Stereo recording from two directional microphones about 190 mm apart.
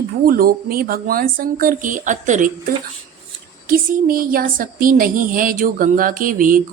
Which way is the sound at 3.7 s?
50° right (ahead or behind).